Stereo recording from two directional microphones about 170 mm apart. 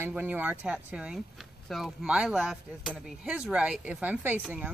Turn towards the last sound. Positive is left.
turn(degrees=-5)  # may be behind; listen again after turning